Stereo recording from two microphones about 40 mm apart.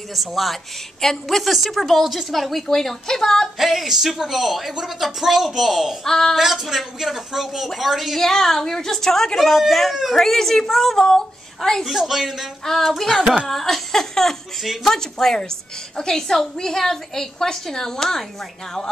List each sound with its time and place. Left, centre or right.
0.1 s a woman's voice: centre
3.5 s a woman's voice: centre
6.0 s a woman's voice: centre
6.3 s speech: centre
8.2 s a woman's voice: centre
12.0 s speech: centre
12.6 s a woman's voice: centre
12.9 s a woman's voice: centre
15.0 s a woman's voice: centre